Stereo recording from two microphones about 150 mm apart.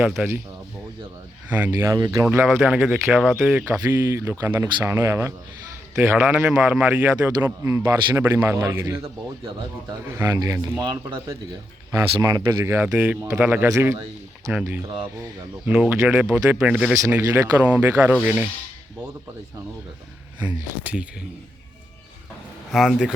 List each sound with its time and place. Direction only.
0.2 s a man's voice: 10° right (ahead or behind)
1.5 s a man's voice: 10° right (ahead or behind)
1.9 s a man's voice: 25° right (ahead or behind); by 3.5 s centre (ahead or behind)
3.5 s a man's voice: 15° right (ahead or behind)
20.8 s a man's voice: 5° right (ahead or behind)
22.7 s speech: 5° right (ahead or behind)